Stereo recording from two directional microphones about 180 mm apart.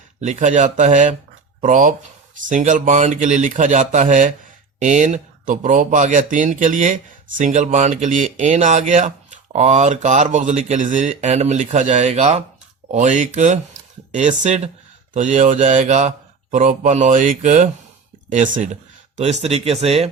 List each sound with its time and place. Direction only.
0.2 s speech: 40° right (ahead or behind)